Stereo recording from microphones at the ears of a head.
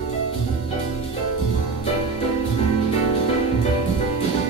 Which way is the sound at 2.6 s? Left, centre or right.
Right.